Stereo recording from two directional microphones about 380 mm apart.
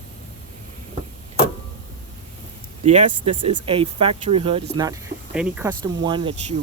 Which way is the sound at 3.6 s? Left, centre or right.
Centre.